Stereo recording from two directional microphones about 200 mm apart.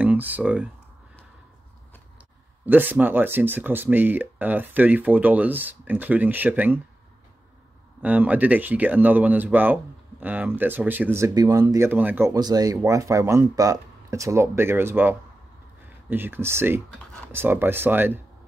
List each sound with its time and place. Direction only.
0.0 s speech: 10° right (ahead or behind)
2.6 s speech: 10° right (ahead or behind)
8.0 s speech: 10° right (ahead or behind)